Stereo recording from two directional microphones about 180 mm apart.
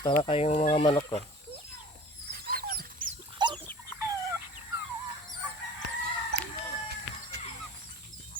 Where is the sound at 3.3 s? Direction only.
25° right (ahead or behind).